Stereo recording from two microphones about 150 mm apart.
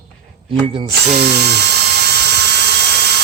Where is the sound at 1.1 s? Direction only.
90° right.